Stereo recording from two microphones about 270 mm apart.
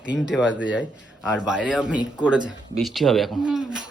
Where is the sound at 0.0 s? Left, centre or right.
Centre.